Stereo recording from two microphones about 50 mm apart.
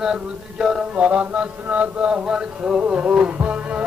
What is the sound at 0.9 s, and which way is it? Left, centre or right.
Mantra, right.